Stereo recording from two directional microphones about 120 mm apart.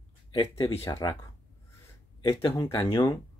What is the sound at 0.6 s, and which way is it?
Speech, 55° left (ahead or behind).